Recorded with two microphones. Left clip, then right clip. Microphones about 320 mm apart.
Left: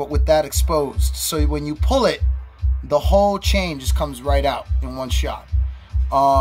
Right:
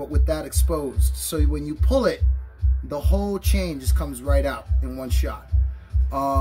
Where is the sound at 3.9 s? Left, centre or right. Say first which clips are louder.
Left 5 dB; centre.